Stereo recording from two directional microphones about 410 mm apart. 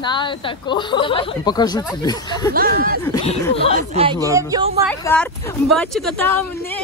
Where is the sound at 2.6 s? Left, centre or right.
Right.